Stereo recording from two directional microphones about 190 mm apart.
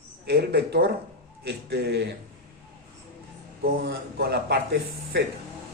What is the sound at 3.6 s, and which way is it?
Speech, 55° right (ahead or behind).